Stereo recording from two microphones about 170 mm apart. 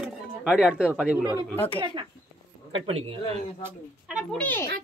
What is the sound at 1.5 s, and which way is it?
Speech, 10° left (ahead or behind).